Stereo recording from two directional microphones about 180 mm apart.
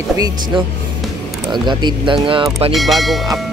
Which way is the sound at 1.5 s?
25° right (ahead or behind).